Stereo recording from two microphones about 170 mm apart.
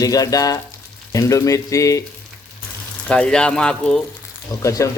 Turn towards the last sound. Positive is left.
turn(degrees=20)  # may be behind; listen again after turning